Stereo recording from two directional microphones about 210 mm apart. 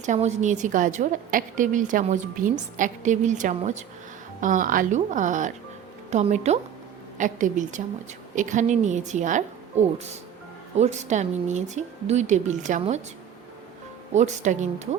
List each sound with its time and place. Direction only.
0.0 s a woman's voice: 35° right (ahead or behind)
14.1 s a woman's voice: 35° right (ahead or behind)